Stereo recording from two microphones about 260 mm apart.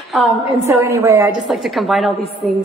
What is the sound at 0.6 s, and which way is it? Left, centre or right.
A woman's voice, centre.